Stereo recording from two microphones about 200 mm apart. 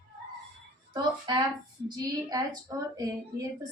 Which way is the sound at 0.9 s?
20° right (ahead or behind).